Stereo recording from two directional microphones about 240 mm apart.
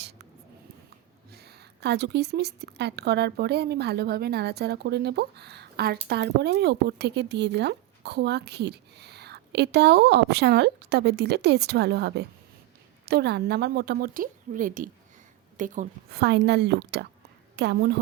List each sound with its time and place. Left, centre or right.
1.3 s a woman's voice: right
16.2 s speech: right